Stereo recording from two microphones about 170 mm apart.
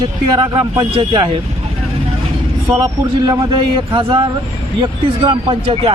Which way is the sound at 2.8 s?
25° right (ahead or behind).